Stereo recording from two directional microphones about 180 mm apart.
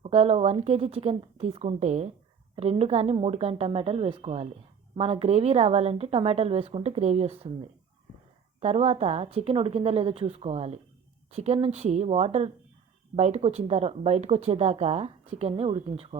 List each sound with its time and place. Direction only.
0.0 s speech: 35° right (ahead or behind)
8.6 s speech: 35° right (ahead or behind)